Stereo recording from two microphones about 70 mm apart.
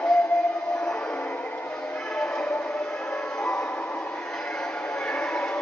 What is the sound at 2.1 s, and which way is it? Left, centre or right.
Music, centre.